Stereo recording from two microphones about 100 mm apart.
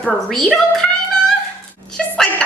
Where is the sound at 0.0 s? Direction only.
5° left (ahead or behind).